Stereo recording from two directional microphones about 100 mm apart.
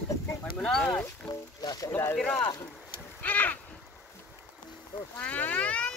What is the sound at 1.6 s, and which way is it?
Speech, 40° left (ahead or behind).